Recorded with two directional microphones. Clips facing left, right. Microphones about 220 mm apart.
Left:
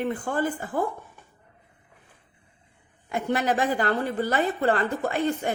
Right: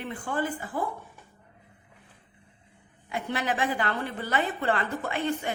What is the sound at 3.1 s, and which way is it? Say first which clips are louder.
A woman's voice: left 5 dB; 45° left (ahead or behind).